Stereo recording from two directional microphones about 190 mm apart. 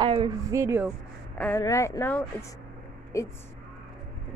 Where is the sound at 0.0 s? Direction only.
25° right (ahead or behind).